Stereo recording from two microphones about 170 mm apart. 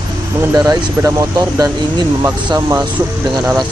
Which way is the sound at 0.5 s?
20° right (ahead or behind).